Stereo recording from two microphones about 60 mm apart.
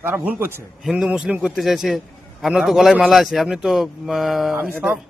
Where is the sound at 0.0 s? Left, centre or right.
Right.